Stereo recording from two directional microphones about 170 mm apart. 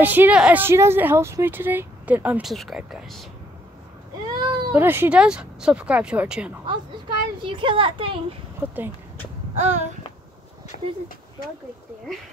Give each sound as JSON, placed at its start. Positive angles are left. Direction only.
{"t": 0.0, "sound": "a woman's voice", "side_deg": -10}
{"t": 4.4, "sound": "cat", "side_deg": -25}
{"t": 4.7, "sound": "a woman's voice", "side_deg": -10}
{"t": 6.6, "sound": "a child's voice", "side_deg": -30}
{"t": 8.5, "sound": "a woman's voice", "side_deg": -10}
{"t": 10.7, "sound": "speech", "side_deg": 50}